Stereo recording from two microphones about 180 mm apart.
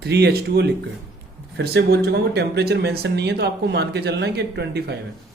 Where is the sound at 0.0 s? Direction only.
65° right (ahead or behind).